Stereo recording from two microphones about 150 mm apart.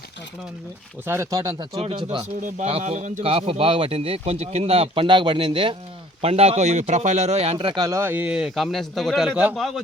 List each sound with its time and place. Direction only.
1.0 s speech: 15° right (ahead or behind)
1.8 s speech: 40° right (ahead or behind)
2.4 s a man's voice: 50° right (ahead or behind)
3.2 s speech: 40° right (ahead or behind)
6.2 s speech: 45° right (ahead or behind)
7.8 s a man's voice: 20° right (ahead or behind); by 9.8 s centre (ahead or behind)